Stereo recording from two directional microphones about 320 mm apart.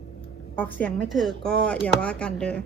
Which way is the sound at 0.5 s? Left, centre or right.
Centre.